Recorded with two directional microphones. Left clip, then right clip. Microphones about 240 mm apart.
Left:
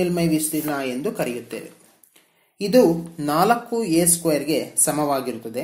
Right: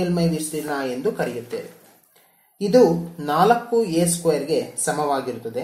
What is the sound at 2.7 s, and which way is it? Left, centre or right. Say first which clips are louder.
Speech: right 1 dB; left.